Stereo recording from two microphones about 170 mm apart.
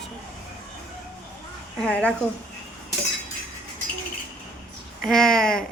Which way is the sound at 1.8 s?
5° left (ahead or behind).